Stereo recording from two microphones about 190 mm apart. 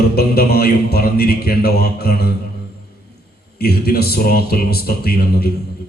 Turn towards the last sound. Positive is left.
turn(degrees=55)  # may be behind; listen again after turning